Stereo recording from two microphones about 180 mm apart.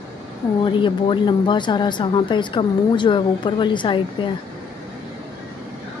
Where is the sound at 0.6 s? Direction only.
25° left (ahead or behind).